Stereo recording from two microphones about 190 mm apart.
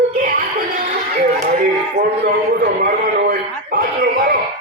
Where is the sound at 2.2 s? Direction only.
60° right (ahead or behind).